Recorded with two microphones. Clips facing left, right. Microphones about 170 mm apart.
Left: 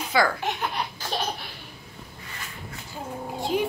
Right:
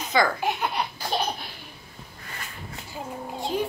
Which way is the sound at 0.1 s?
5° left (ahead or behind).